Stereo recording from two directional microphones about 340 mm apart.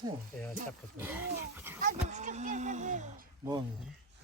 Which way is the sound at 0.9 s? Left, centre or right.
Centre.